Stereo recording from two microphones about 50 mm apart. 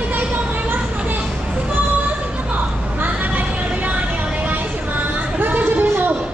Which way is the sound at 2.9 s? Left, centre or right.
Right.